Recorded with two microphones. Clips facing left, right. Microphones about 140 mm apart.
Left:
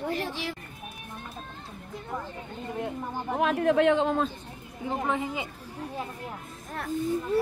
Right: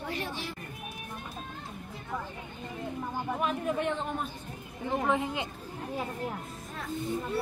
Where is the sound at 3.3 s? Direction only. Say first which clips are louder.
Left 9 dB; 85° left.